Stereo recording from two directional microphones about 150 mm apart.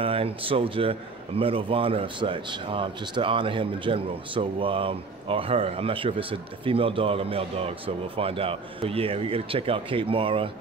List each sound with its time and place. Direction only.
0.0 s a man's voice: 40° right (ahead or behind)